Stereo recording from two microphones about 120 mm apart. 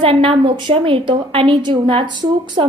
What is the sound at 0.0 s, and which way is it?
A woman's voice, 50° right (ahead or behind).